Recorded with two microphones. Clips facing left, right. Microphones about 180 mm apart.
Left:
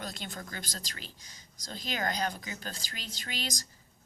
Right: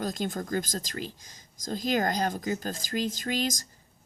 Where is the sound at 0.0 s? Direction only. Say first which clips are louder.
Right 10 dB; 45° right (ahead or behind).